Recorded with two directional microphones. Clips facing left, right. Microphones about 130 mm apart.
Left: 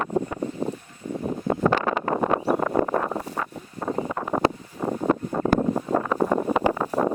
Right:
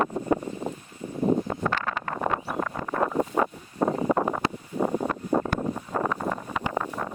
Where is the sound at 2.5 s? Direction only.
35° left (ahead or behind).